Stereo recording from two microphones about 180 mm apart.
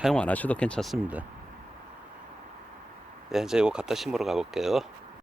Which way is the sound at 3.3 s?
Centre (ahead or behind).